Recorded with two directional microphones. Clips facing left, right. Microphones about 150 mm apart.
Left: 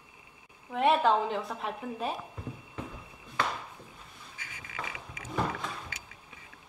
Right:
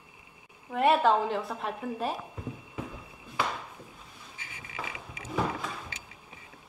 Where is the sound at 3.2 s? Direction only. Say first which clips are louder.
Right 1 dB; 5° right (ahead or behind).